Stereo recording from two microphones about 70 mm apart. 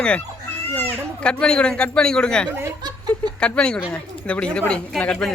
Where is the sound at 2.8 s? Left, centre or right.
Right.